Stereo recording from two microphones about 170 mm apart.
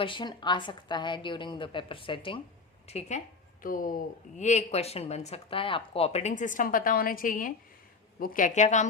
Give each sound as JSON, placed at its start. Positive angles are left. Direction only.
{"t": 0.0, "sound": "a woman's voice", "side_deg": 30}
{"t": 3.6, "sound": "speech", "side_deg": 55}